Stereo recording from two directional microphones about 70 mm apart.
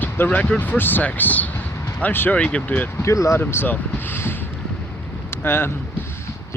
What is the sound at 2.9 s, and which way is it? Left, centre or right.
Speech, left.